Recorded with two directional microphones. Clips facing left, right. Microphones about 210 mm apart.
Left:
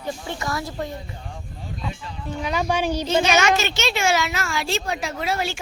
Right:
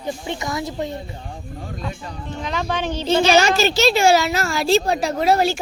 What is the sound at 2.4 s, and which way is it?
Speech, 10° left (ahead or behind).